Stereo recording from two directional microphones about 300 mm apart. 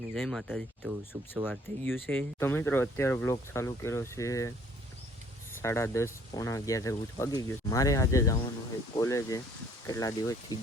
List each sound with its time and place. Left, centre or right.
0.1 s speech: centre
1.8 s speech: centre
5.6 s speech: centre